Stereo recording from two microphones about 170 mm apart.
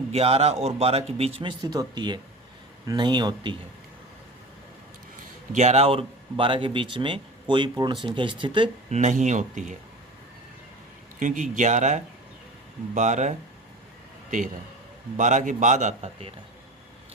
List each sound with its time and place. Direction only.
0.1 s a man's voice: 35° right (ahead or behind)
5.5 s speech: 40° right (ahead or behind)
8.9 s a man's voice: 45° right (ahead or behind)
11.2 s a man's voice: 45° right (ahead or behind)